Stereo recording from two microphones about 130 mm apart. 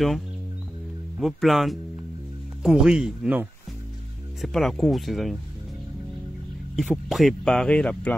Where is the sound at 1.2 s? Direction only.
Centre (ahead or behind).